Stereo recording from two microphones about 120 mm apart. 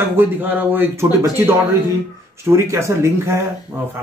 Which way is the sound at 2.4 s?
20° right (ahead or behind).